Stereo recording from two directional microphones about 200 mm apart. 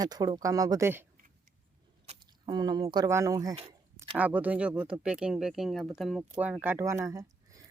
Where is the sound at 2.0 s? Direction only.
20° right (ahead or behind).